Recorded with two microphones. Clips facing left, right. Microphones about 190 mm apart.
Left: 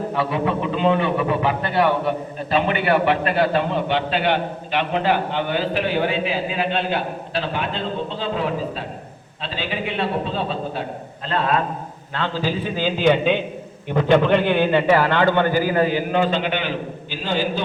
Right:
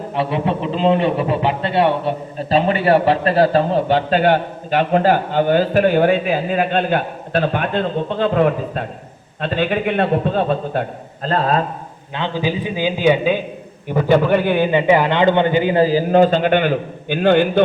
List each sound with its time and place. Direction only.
0.1 s a man's voice: 25° right (ahead or behind)
12.1 s a man's voice: 15° right (ahead or behind); by 17.6 s 60° right (ahead or behind)